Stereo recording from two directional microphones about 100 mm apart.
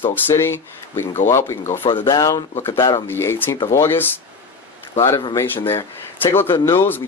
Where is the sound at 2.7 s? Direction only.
50° left (ahead or behind).